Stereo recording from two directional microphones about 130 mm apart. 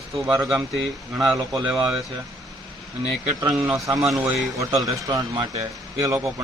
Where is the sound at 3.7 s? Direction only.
25° right (ahead or behind).